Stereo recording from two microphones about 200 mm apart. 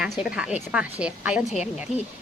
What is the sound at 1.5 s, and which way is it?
Speech, 35° left (ahead or behind).